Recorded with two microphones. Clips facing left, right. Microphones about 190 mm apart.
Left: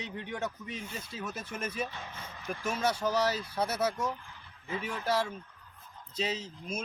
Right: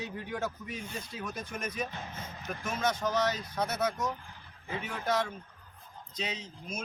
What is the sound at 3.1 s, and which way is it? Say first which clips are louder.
Speech: left 1 dB; 30° left (ahead or behind).